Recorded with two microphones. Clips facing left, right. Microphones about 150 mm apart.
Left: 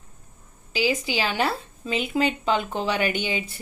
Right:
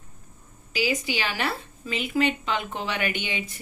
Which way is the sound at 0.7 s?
30° left (ahead or behind).